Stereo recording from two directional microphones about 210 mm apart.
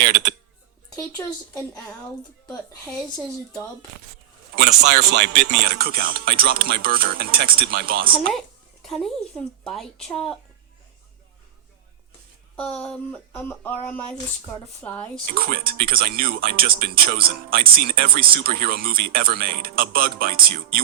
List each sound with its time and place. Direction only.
0.0 s speech: 50° right (ahead or behind)
0.9 s speech: 15° left (ahead or behind)
4.5 s speech: 50° right (ahead or behind)
8.3 s speech: centre (ahead or behind)
12.5 s speech: 5° left (ahead or behind)
15.3 s speech: 45° right (ahead or behind)